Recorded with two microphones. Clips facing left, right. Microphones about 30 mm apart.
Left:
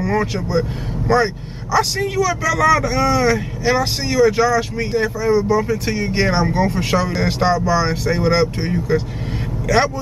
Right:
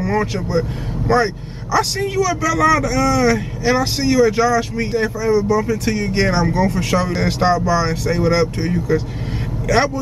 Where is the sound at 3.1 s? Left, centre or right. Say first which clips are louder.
Right 1 dB; centre.